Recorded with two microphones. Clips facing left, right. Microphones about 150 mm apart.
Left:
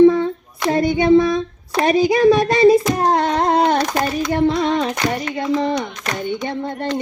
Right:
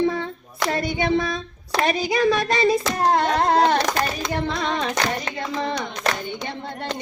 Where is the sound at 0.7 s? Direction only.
20° left (ahead or behind).